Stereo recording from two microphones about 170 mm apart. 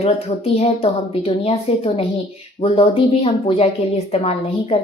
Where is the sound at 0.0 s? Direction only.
35° left (ahead or behind).